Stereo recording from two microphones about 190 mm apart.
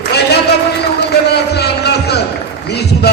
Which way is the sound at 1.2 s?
60° left (ahead or behind).